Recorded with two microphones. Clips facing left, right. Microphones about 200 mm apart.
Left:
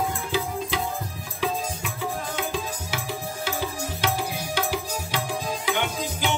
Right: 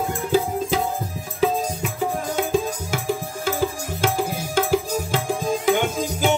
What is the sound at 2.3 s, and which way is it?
Music, 45° right (ahead or behind).